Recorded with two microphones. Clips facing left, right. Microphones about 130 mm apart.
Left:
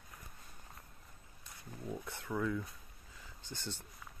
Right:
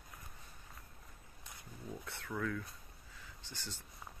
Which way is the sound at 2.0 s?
20° left (ahead or behind).